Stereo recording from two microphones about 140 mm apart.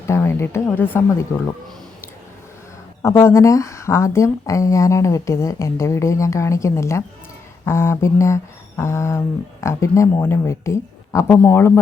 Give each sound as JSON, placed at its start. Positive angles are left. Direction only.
{"t": 0.1, "sound": "a woman's voice", "side_deg": 20}
{"t": 3.0, "sound": "speech", "side_deg": 20}